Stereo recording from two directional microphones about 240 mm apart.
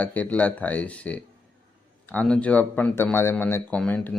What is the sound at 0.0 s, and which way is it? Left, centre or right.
Speech, centre.